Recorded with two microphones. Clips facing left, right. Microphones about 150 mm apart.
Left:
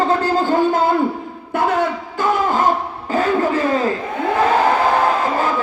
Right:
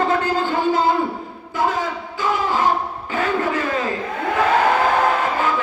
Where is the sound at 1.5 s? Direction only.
65° left (ahead or behind).